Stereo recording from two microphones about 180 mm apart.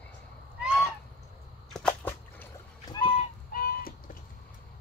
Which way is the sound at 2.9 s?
30° left (ahead or behind).